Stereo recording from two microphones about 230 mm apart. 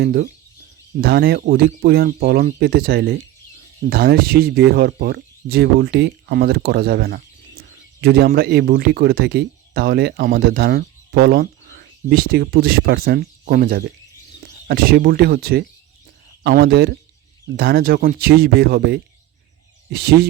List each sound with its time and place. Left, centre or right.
0.0 s speech: right